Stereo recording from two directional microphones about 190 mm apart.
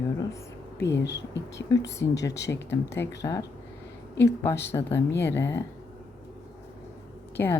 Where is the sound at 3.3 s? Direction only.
15° left (ahead or behind).